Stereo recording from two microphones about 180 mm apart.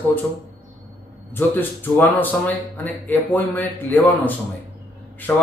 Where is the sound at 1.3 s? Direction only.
10° left (ahead or behind).